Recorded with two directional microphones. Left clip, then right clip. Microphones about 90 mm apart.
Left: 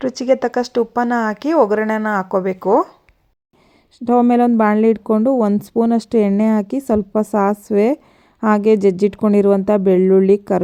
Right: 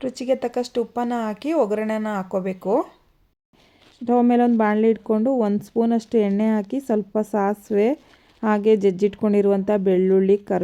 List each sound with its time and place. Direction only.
0.0 s speech: 45° left (ahead or behind)
3.9 s speech: 40° left (ahead or behind)